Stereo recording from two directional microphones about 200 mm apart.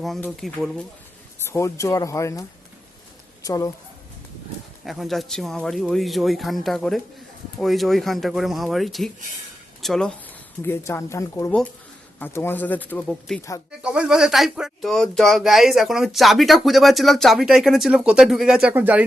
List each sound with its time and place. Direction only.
0.0 s speech: centre (ahead or behind)
1.4 s speech: 15° left (ahead or behind)
4.9 s speech: centre (ahead or behind)